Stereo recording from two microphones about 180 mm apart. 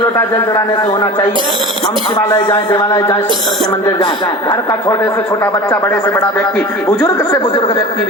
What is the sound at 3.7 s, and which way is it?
A woman's voice, 20° left (ahead or behind).